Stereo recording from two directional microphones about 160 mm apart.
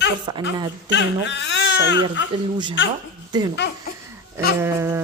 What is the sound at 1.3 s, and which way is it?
Speech, 90° left.